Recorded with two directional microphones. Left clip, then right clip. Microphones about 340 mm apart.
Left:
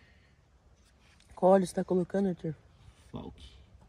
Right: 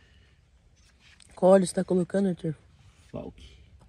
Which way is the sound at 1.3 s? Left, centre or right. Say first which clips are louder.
Right 4 dB; right.